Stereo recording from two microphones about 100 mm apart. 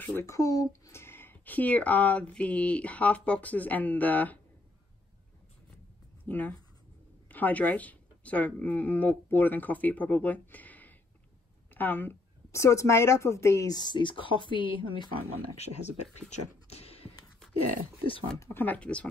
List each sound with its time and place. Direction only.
0.0 s a child's voice: 20° left (ahead or behind)
0.3 s speech: 35° left (ahead or behind); by 4.4 s 15° left (ahead or behind)
6.2 s a woman's voice: 15° left (ahead or behind)
13.7 s speech: 50° left (ahead or behind)
15.5 s speech: 90° left
16.6 s a sound: 90° left
18.4 s speech: 20° left (ahead or behind)